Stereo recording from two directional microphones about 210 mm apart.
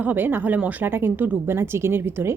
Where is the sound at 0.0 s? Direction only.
10° right (ahead or behind).